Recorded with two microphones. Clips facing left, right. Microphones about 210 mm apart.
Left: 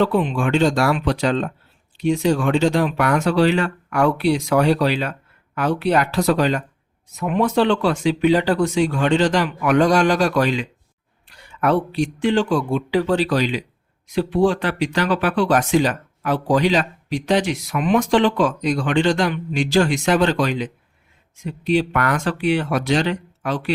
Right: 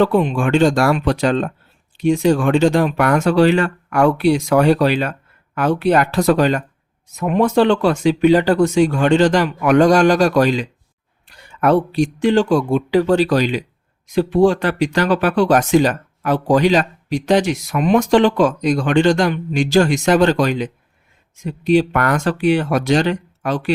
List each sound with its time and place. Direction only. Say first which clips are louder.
0.0 s speech: right 3 dB; 45° right (ahead or behind)